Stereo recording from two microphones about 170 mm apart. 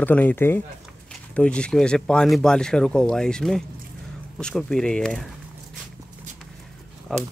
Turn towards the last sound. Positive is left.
turn(degrees=0)  # may be behind; listen again after turning